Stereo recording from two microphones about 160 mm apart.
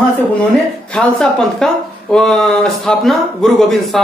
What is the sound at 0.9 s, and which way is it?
Speech, 5° left (ahead or behind).